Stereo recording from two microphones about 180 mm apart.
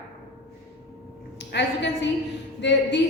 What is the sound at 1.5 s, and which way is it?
A woman's voice, 75° left (ahead or behind).